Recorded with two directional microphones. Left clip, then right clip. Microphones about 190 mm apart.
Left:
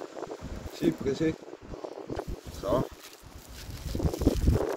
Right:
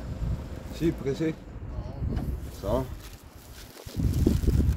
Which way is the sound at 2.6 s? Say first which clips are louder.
Left 1 dB; 10° right (ahead or behind).